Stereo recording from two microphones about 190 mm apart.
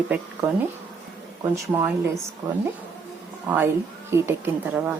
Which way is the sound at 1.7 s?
15° right (ahead or behind).